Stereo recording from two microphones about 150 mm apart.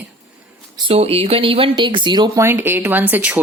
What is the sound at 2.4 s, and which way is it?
Speech, 15° right (ahead or behind).